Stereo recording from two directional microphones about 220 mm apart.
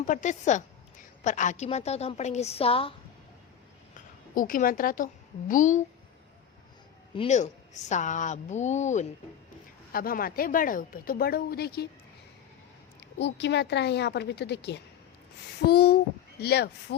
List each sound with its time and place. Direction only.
0.0 s a woman's voice: 35° left (ahead or behind)
4.4 s speech: 40° left (ahead or behind)
7.2 s speech: 30° left (ahead or behind)
13.1 s a woman's voice: 50° left (ahead or behind)